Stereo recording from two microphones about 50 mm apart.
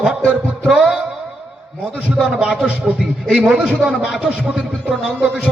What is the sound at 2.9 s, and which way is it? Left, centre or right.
A man's voice, centre.